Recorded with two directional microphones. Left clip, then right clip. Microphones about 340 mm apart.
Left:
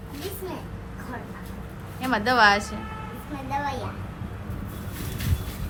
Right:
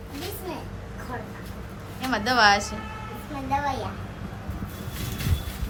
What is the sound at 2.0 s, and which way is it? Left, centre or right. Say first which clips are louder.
Speech: left 1 dB; centre.